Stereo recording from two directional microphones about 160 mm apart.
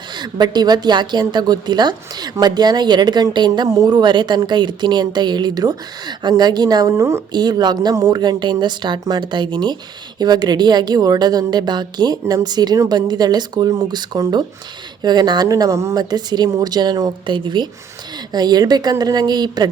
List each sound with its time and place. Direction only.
0.2 s a woman's voice: 25° right (ahead or behind)